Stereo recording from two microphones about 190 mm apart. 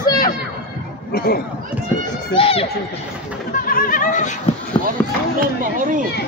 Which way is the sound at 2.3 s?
30° left (ahead or behind).